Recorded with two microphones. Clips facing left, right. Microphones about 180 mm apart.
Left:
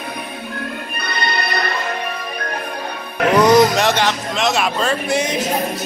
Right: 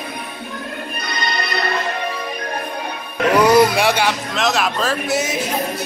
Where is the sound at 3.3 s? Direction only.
10° right (ahead or behind).